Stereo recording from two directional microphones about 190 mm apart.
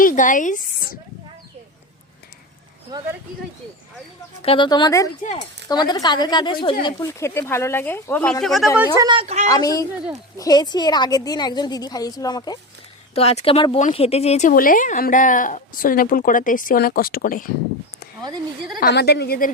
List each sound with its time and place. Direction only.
0.0 s speech: 45° left (ahead or behind)
4.4 s a woman's voice: 25° left (ahead or behind); by 8.9 s 5° right (ahead or behind)
9.0 s speech: 25° right (ahead or behind)
9.2 s a woman's voice: 35° right (ahead or behind)
9.5 s a woman's voice: 20° left (ahead or behind)
13.1 s a woman's voice: 30° left (ahead or behind); by 17.4 s 50° left (ahead or behind)
18.8 s a woman's voice: 60° left (ahead or behind)